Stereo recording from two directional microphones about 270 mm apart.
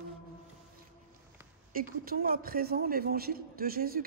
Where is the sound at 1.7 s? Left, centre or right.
Right.